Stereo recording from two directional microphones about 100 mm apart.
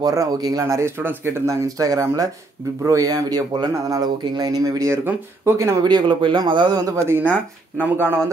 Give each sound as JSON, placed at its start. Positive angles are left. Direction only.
{"t": 0.0, "sound": "speech", "side_deg": -35}
{"t": 5.9, "sound": "speech", "side_deg": -50}
{"t": 6.9, "sound": "speech", "side_deg": -25}
{"t": 7.2, "sound": "speech", "side_deg": -15}